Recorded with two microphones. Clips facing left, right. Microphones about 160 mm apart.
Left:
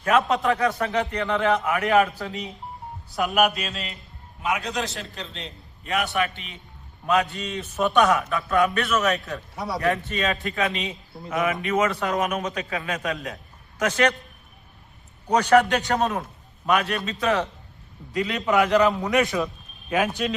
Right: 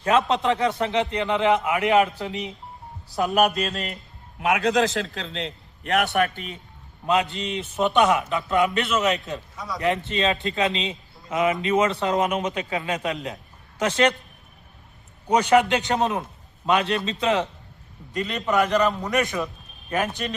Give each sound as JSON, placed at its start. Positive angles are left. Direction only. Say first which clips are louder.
{"t": 0.0, "sound": "a man's voice", "louder": "even", "side_deg": -25}
{"t": 3.2, "sound": "mantra", "louder": "right 1 dB", "side_deg": -30}
{"t": 3.5, "sound": "mantra", "louder": "right 5 dB", "side_deg": -45}
{"t": 4.4, "sound": "a man's voice", "louder": "right 6 dB", "side_deg": -75}
{"t": 6.1, "sound": "mantra", "louder": "right 3 dB", "side_deg": -45}
{"t": 7.1, "sound": "a man's voice", "louder": "even", "side_deg": -25}
{"t": 9.6, "sound": "speech", "louder": "left 4 dB", "side_deg": 25}
{"t": 9.8, "sound": "a man's voice", "louder": "right 2 dB", "side_deg": -20}
{"t": 15.3, "sound": "a man's voice", "louder": "even", "side_deg": -20}
{"t": 18.1, "sound": "a man's voice", "louder": "left 1 dB", "side_deg": 0}